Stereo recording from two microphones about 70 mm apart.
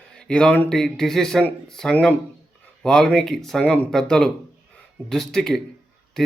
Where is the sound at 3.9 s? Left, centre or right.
Centre.